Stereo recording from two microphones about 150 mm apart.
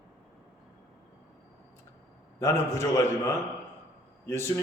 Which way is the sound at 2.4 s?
20° left (ahead or behind).